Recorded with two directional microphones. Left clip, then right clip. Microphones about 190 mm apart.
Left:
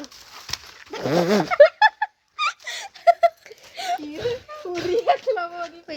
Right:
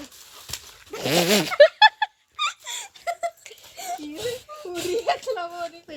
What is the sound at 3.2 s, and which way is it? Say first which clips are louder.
Laughter: left 11 dB; 30° left (ahead or behind).